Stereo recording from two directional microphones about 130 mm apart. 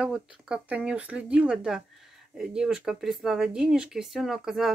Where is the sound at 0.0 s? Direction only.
5° right (ahead or behind).